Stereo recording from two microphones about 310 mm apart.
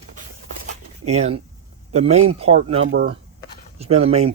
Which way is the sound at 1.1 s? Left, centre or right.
Right.